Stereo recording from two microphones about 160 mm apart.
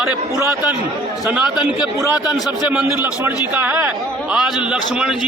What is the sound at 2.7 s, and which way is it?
A man's voice, 10° right (ahead or behind).